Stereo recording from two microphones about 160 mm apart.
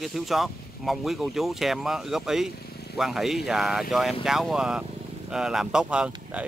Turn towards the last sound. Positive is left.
turn(degrees=-5)  # may be behind; listen again after turning